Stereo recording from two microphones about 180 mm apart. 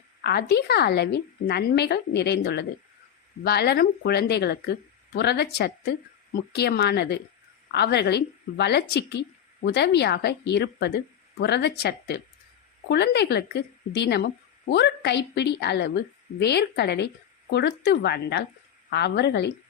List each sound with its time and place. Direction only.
0.2 s a woman's voice: 65° left (ahead or behind)